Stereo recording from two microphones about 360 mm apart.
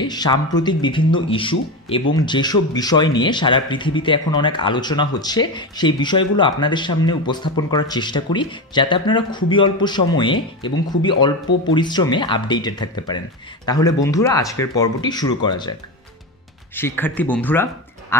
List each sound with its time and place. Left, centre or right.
0.0 s speech: centre
16.7 s speech: centre